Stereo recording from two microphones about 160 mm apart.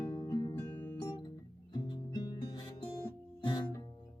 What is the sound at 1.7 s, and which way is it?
Music, 25° left (ahead or behind).